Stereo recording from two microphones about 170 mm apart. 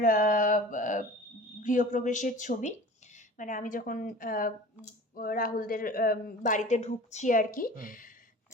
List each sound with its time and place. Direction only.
0.0 s mantra: 50° left (ahead or behind)
1.6 s speech: 50° left (ahead or behind)